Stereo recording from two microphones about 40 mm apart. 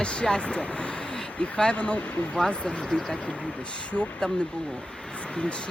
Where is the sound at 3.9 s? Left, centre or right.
Left.